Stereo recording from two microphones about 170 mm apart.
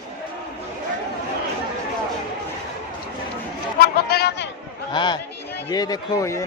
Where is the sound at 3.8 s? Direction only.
70° left (ahead or behind).